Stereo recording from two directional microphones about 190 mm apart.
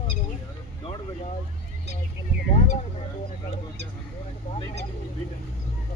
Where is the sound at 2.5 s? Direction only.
40° left (ahead or behind).